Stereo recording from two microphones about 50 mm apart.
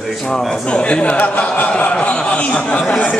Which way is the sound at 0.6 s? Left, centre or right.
Left.